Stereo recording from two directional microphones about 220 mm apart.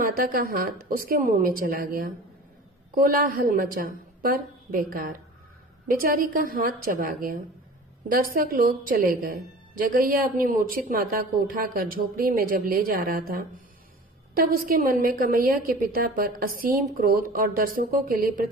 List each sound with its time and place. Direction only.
0.2 s a woman's voice: 40° right (ahead or behind)